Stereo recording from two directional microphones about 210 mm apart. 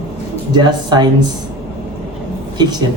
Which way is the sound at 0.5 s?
20° right (ahead or behind).